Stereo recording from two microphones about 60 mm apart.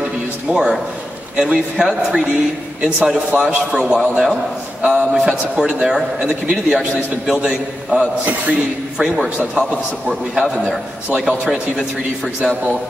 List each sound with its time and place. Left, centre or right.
0.5 s a man's voice: centre
9.6 s a man's voice: centre